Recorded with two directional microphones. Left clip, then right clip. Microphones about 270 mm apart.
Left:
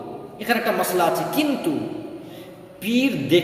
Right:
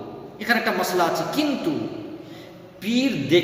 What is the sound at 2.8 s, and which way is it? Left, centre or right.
Speech, centre.